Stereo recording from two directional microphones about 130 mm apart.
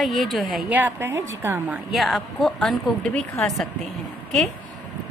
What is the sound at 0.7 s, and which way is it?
A woman's voice, 15° right (ahead or behind).